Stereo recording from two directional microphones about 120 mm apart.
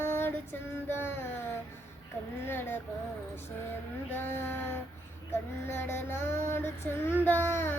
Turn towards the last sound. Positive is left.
turn(degrees=20)  # may be behind; listen again after turning